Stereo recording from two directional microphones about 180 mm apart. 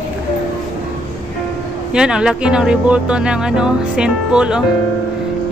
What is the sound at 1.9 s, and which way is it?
Speech, 5° right (ahead or behind).